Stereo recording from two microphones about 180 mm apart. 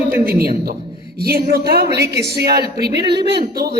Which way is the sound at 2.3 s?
60° right (ahead or behind).